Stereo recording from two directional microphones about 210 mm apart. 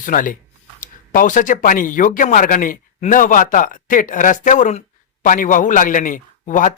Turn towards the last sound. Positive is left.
turn(degrees=40)  # may be behind; listen again after turning